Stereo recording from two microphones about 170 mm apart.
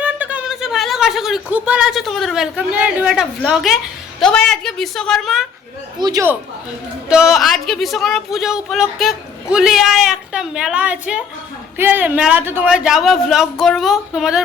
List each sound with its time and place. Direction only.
0.0 s speech: 10° right (ahead or behind)
6.0 s a man's voice: 25° right (ahead or behind)
7.1 s speech: 5° right (ahead or behind)